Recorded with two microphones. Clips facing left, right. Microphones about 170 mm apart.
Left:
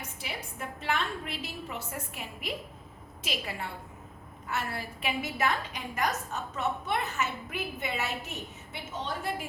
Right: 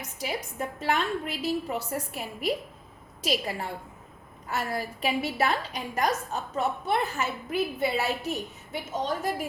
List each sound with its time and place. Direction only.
0.8 s a woman's voice: 40° right (ahead or behind)